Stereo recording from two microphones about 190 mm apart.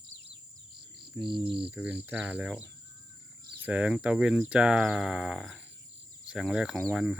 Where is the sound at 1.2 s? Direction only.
25° right (ahead or behind).